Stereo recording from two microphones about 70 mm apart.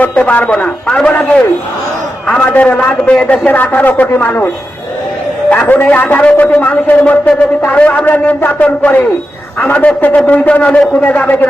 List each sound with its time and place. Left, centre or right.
0.0 s a man's voice: centre
5.5 s speech: left